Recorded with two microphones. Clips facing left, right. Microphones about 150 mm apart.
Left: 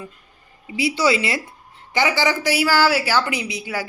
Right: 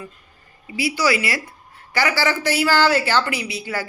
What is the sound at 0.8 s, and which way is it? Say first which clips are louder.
A woman's voice: left 1 dB; 20° left (ahead or behind).